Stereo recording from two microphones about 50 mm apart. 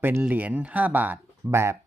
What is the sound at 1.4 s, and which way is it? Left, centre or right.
Speech, right.